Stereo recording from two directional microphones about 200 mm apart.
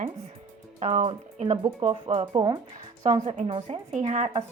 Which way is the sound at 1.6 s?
20° right (ahead or behind).